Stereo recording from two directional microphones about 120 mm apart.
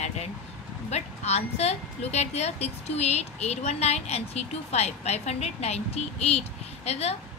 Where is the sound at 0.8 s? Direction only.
65° left (ahead or behind).